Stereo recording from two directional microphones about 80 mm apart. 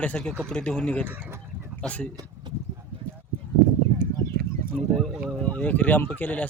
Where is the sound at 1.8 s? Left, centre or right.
Centre.